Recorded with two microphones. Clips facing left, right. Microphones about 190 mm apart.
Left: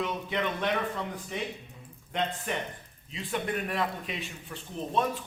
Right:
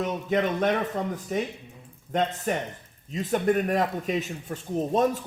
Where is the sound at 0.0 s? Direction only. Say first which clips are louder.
Right 6 dB; 45° right (ahead or behind).